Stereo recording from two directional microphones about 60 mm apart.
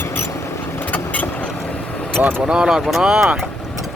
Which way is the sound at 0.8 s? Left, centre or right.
Left.